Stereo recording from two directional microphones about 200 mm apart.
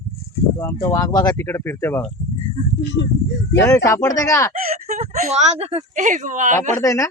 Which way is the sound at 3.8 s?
15° left (ahead or behind).